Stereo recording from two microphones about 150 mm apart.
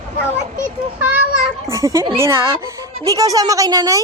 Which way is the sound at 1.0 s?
10° right (ahead or behind).